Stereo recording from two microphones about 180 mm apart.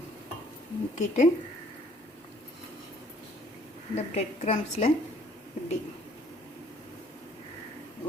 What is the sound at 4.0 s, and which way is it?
Speech, 35° left (ahead or behind).